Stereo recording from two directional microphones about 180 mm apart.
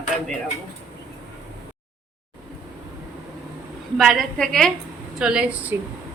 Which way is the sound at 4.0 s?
Centre (ahead or behind).